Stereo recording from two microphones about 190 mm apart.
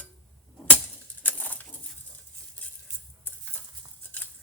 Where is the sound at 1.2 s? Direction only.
10° left (ahead or behind).